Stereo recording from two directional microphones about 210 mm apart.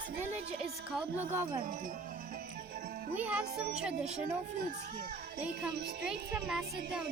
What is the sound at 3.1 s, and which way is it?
Speech, 5° right (ahead or behind).